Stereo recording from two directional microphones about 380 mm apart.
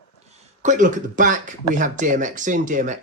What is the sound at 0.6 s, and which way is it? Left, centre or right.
Speech, centre.